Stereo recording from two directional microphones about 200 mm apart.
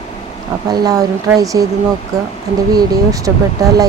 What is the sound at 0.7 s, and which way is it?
Speech, 20° right (ahead or behind).